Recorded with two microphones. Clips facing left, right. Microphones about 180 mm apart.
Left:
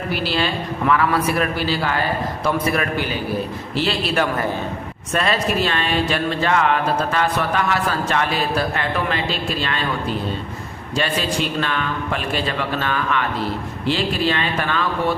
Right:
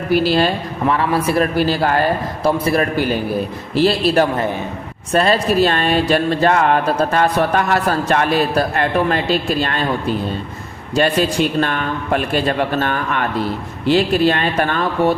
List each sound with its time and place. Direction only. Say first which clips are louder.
0.1 s speech: right 9 dB; 45° right (ahead or behind)
0.9 s a man's voice: right 2 dB; 30° right (ahead or behind)
1.5 s speech: right 6 dB; 45° right (ahead or behind)
2.4 s a man's voice: right 5 dB; 30° right (ahead or behind)
10.9 s speech: right 6 dB; 45° right (ahead or behind)